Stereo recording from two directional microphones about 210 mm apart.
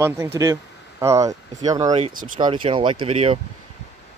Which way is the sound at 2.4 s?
25° right (ahead or behind).